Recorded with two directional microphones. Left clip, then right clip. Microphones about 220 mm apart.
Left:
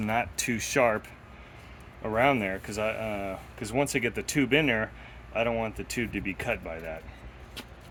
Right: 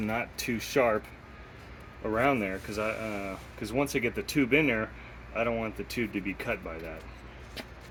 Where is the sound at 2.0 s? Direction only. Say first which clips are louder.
Left 2 dB; 45° left (ahead or behind).